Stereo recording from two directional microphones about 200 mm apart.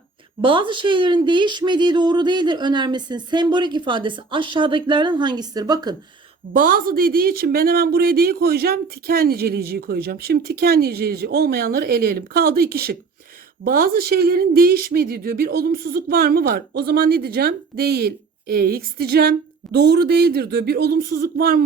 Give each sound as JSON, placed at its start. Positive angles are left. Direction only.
{"t": 0.4, "sound": "speech", "side_deg": -25}
{"t": 6.5, "sound": "a woman's voice", "side_deg": -45}